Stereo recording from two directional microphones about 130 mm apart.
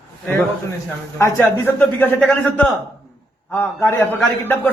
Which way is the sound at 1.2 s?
15° left (ahead or behind).